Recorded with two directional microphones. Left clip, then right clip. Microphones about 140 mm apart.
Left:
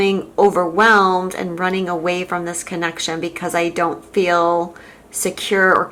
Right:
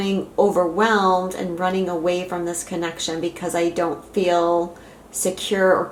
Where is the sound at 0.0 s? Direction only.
35° left (ahead or behind).